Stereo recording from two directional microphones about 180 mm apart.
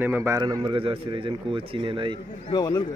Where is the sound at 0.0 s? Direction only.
10° right (ahead or behind); by 2.1 s 30° right (ahead or behind).